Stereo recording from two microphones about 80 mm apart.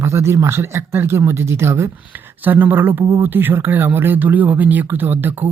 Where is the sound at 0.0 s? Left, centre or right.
Right.